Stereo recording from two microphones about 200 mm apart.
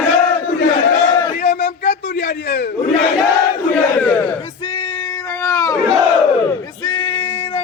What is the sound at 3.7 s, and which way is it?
Battle cry, 5° left (ahead or behind).